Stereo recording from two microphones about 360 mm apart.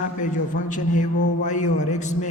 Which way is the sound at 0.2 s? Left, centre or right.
Left.